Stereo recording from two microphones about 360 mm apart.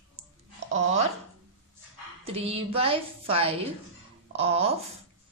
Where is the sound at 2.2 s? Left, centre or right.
Centre.